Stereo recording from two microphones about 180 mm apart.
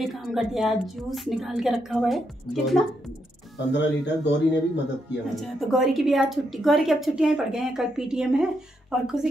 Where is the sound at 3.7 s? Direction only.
75° left (ahead or behind).